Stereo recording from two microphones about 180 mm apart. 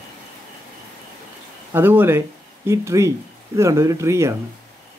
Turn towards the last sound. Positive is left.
turn(degrees=-15)  # may be behind; listen again after turning